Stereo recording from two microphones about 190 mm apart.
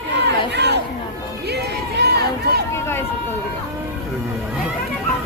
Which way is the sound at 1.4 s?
60° right (ahead or behind).